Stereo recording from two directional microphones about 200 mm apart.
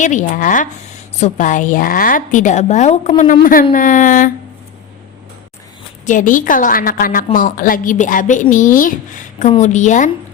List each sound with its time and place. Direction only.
0.0 s a woman's voice: 40° left (ahead or behind)
6.1 s a woman's voice: 40° left (ahead or behind)